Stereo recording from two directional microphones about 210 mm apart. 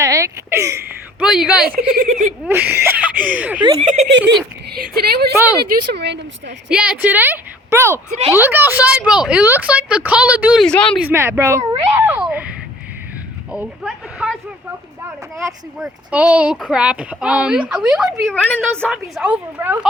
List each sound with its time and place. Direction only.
0.0 s a sound: 15° right (ahead or behind)
2.0 s speech: 35° right (ahead or behind)
2.4 s a woman's voice: 10° right (ahead or behind)
3.6 s speech: 20° right (ahead or behind)
4.9 s speech: 50° right (ahead or behind)
5.3 s a woman's voice: 10° right (ahead or behind)
5.5 s speech: 50° right (ahead or behind)
6.7 s a woman's voice: 5° right (ahead or behind)
11.0 s a woman's voice: 10° right (ahead or behind)
11.9 s a sound: 10° right (ahead or behind)
15.8 s speech: 5° right (ahead or behind)